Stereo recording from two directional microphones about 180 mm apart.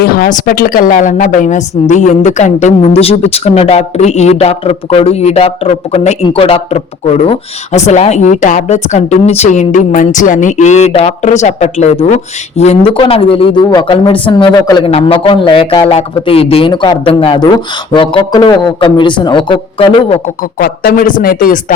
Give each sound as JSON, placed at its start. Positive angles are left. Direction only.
{"t": 0.0, "sound": "a woman's voice", "side_deg": 55}
{"t": 20.6, "sound": "speech", "side_deg": 55}